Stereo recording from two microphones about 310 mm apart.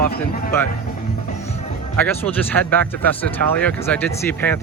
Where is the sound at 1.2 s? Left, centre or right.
Left.